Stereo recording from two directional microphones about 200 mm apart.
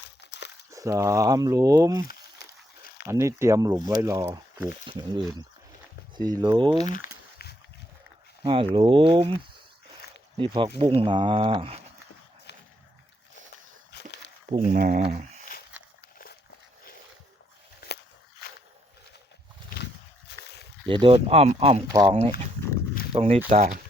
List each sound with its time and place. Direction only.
0.2 s crumpling: 60° left (ahead or behind)
0.7 s speech: 15° right (ahead or behind)
3.1 s speech: 15° right (ahead or behind)
4.9 s speech: 20° right (ahead or behind)
6.7 s a sound: 40° left (ahead or behind)
8.4 s speech: 25° right (ahead or behind)
10.4 s speech: 25° right (ahead or behind)
13.9 s walk: 55° left (ahead or behind)
14.7 s speech: 40° right (ahead or behind)
17.7 s a sound: 55° left (ahead or behind)
19.8 s a sound: 55° left (ahead or behind)
20.8 s speech: 25° right (ahead or behind)